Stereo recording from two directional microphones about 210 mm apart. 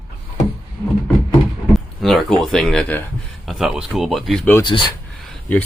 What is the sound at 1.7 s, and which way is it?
Speech, centre (ahead or behind).